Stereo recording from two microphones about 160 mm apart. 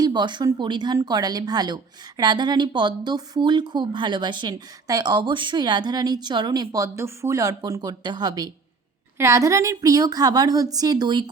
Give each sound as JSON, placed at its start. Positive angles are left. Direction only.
{"t": 0.0, "sound": "speech", "side_deg": -25}